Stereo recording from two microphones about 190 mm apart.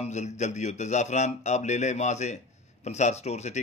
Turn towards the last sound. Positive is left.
turn(degrees=35)  # may be behind; listen again after turning